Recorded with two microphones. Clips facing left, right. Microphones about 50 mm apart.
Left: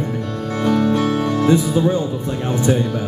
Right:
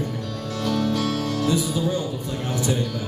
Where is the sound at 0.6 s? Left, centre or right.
Left.